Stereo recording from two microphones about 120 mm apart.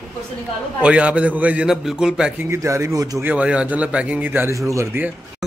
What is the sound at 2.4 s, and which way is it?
Speech, 25° right (ahead or behind).